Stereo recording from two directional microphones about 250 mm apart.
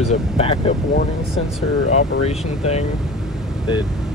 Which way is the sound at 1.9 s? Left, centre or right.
Left.